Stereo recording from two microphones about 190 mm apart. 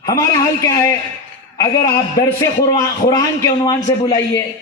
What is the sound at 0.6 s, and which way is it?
A man's voice, 15° left (ahead or behind).